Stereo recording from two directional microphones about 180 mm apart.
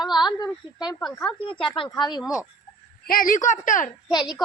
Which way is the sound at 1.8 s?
25° left (ahead or behind).